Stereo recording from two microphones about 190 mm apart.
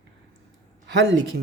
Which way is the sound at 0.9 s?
65° right (ahead or behind).